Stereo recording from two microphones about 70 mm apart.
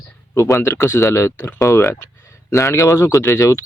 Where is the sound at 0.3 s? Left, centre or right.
Left.